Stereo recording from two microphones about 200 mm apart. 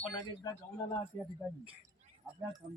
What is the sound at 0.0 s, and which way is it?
Speech, 20° left (ahead or behind).